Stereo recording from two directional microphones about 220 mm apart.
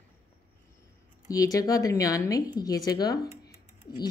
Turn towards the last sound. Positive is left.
turn(degrees=20)  # may be behind; listen again after turning